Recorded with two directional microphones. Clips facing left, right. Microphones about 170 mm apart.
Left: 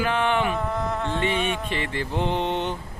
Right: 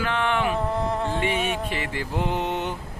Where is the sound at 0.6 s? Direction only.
30° right (ahead or behind).